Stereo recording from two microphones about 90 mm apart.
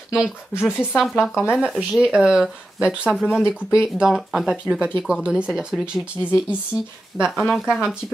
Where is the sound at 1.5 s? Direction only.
5° right (ahead or behind).